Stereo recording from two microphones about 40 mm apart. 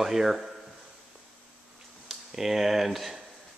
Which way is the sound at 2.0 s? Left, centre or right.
Centre.